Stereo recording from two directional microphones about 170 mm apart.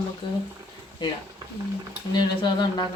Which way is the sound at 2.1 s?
25° left (ahead or behind).